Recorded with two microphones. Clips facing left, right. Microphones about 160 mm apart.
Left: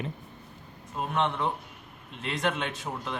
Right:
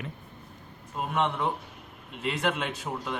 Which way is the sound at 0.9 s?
5° right (ahead or behind).